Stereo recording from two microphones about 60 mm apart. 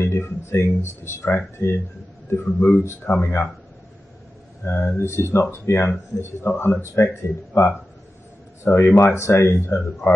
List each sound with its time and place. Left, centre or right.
0.0 s speech: left
4.6 s speech: left